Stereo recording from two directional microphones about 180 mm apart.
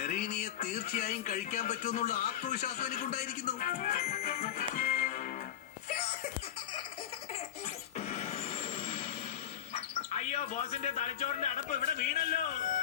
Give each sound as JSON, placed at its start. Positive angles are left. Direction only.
{"t": 0.0, "sound": "speech", "side_deg": 40}
{"t": 7.9, "sound": "a sound", "side_deg": 35}
{"t": 10.3, "sound": "a man's voice", "side_deg": 35}
{"t": 11.9, "sound": "speech", "side_deg": 55}